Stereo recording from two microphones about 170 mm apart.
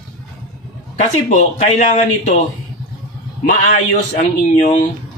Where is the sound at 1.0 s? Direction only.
45° left (ahead or behind).